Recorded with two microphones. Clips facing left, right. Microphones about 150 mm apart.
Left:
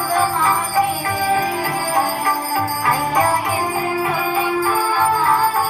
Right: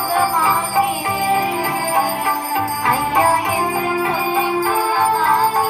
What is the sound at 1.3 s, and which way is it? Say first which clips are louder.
Music: right 1 dB; 20° right (ahead or behind).